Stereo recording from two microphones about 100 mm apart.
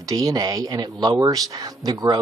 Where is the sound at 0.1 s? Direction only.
40° right (ahead or behind).